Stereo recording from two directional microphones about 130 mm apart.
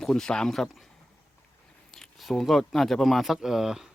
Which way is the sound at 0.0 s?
5° left (ahead or behind).